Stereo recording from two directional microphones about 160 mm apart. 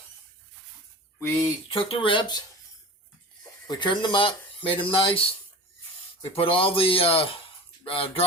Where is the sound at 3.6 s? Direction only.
25° left (ahead or behind).